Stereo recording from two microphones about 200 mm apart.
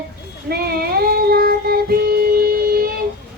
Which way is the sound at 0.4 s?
50° right (ahead or behind).